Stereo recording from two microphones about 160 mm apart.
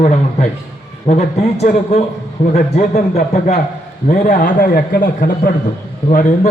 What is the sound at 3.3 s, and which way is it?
Speech, 45° left (ahead or behind).